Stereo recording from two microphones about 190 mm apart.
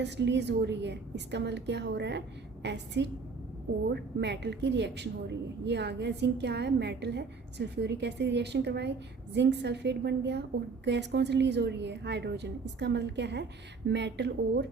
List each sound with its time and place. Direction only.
0.0 s a woman's voice: 65° right (ahead or behind)